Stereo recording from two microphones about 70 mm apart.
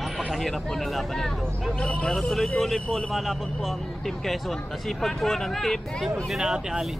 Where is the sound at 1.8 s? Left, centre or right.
Centre.